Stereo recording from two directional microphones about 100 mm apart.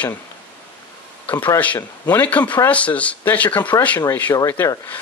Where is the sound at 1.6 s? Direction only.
15° left (ahead or behind).